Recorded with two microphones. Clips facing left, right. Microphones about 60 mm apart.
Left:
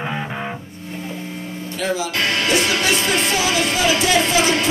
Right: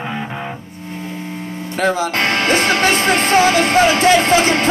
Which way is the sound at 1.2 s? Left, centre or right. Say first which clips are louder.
Right 3 dB; right.